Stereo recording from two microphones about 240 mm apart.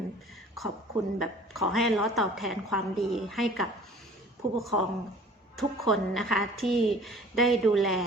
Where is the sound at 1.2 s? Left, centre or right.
Centre.